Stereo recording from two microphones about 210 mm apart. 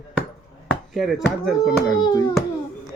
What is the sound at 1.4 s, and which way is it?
Speech, centre (ahead or behind).